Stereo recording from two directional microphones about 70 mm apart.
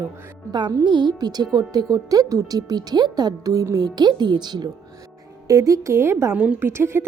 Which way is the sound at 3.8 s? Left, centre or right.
Right.